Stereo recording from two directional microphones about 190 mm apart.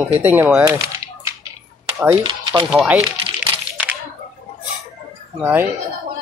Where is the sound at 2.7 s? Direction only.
Centre (ahead or behind).